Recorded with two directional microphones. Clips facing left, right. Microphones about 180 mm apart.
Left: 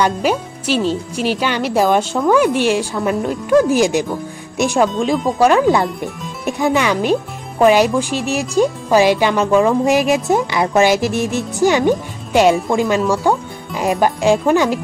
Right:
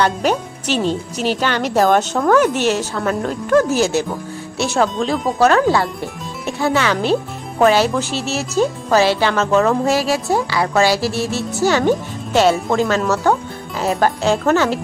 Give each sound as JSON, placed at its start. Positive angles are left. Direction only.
{"t": 0.0, "sound": "speech", "side_deg": 10}